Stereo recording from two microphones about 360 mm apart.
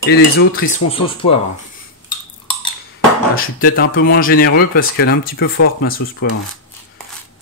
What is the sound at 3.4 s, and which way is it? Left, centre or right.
Speech, left.